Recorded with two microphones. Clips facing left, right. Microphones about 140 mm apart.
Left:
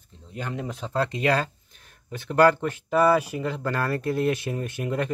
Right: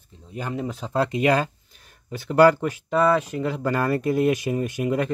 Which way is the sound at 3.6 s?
15° right (ahead or behind).